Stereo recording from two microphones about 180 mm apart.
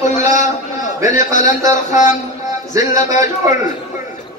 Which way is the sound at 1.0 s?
45° left (ahead or behind).